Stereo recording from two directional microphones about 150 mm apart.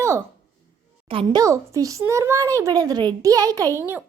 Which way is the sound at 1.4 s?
20° right (ahead or behind).